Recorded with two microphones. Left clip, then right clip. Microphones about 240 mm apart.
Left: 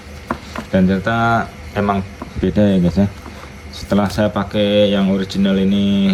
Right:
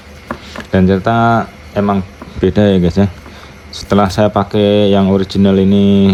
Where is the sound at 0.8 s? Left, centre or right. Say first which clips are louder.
Right 6 dB; right.